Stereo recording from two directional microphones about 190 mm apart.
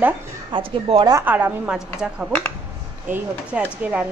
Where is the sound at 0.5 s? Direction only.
30° right (ahead or behind).